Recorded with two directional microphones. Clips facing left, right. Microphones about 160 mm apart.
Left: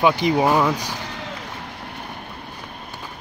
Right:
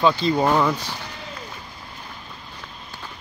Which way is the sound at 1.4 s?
75° left (ahead or behind).